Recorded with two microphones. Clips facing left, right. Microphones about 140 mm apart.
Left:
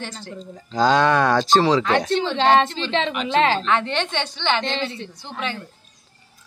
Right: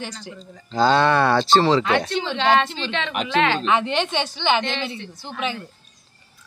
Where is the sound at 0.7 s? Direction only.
10° left (ahead or behind).